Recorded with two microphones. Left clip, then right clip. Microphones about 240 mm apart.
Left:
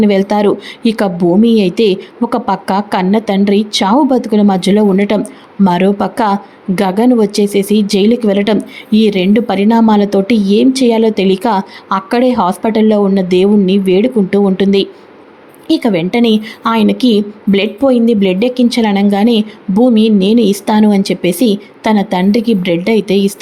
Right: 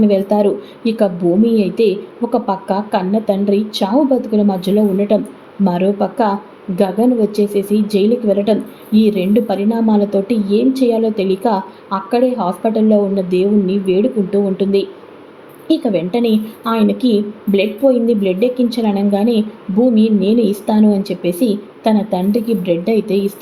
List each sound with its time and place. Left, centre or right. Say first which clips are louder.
0.0 s speech: left 2 dB; left